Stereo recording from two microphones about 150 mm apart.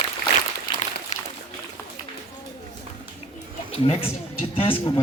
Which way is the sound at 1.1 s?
55° left (ahead or behind).